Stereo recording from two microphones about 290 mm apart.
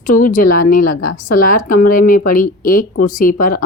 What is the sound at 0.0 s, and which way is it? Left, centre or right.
Speech, left.